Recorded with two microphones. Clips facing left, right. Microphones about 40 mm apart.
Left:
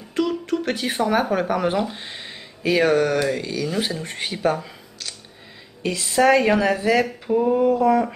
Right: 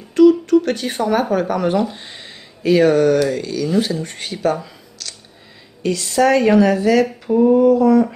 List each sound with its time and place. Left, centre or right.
0.1 s speech: centre
7.2 s a sound: centre
7.5 s speech: centre